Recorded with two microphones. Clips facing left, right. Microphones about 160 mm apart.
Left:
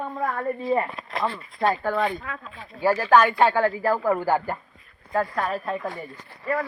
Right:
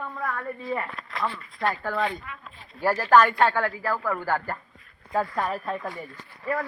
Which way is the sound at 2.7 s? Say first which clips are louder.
Left 3 dB; 70° left (ahead or behind).